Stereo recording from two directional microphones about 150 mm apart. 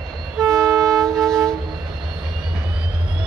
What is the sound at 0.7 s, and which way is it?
Train, centre (ahead or behind).